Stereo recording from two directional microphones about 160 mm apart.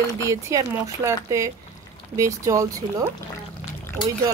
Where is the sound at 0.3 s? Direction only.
20° right (ahead or behind).